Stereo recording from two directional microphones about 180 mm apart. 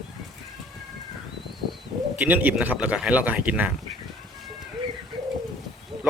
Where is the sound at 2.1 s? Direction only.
10° right (ahead or behind).